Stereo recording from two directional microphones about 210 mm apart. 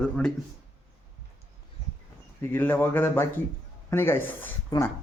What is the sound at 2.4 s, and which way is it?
Speech, 10° left (ahead or behind).